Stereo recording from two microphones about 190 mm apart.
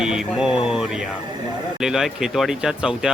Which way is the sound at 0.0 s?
5° right (ahead or behind).